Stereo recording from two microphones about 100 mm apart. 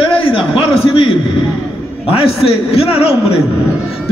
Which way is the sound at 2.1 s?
75° left (ahead or behind).